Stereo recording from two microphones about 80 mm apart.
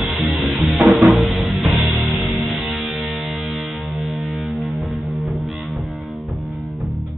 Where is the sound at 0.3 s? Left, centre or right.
Centre.